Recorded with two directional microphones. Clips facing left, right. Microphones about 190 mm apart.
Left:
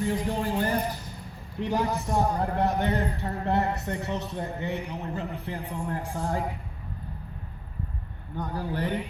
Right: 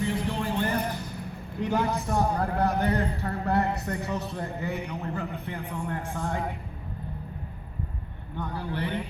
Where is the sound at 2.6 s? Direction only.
20° left (ahead or behind).